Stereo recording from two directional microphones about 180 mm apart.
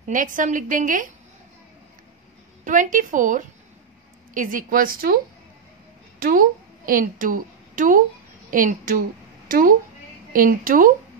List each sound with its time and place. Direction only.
0.0 s a woman's voice: 45° right (ahead or behind)
2.6 s a woman's voice: 45° right (ahead or behind)